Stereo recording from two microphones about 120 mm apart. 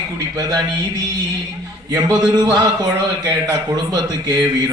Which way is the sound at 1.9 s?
30° right (ahead or behind).